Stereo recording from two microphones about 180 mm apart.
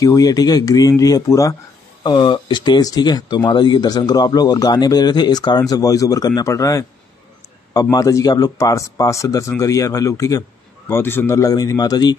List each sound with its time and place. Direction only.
0.0 s speech: 20° left (ahead or behind)